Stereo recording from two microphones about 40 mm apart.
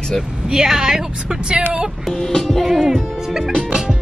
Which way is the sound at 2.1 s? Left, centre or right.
Centre.